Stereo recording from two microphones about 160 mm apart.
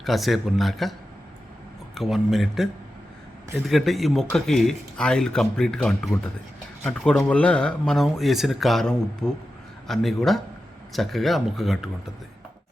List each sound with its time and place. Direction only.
0.0 s speech: centre (ahead or behind)
2.0 s speech: centre (ahead or behind)